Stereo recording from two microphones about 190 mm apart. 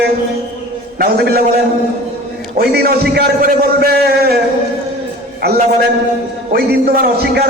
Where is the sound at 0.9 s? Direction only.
50° right (ahead or behind).